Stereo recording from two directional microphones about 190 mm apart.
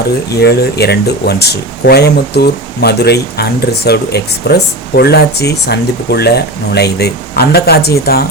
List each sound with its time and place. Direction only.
0.3 s speech: 60° left (ahead or behind)